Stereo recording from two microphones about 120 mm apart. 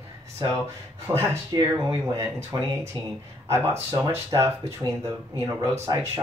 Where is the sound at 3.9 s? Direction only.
25° right (ahead or behind).